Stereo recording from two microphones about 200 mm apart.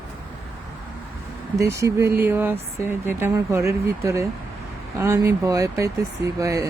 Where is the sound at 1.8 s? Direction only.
15° right (ahead or behind).